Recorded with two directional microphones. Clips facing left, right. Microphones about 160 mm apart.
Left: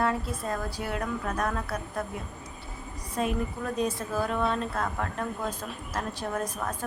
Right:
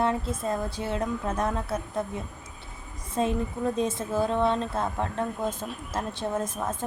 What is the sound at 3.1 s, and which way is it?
Speech, 25° right (ahead or behind).